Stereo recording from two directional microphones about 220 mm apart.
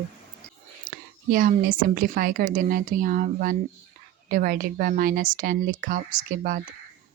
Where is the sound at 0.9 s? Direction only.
40° right (ahead or behind).